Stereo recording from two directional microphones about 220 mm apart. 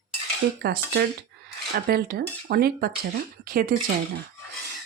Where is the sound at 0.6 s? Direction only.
45° right (ahead or behind).